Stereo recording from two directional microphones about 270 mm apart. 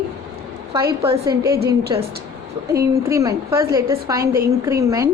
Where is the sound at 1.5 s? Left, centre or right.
Right.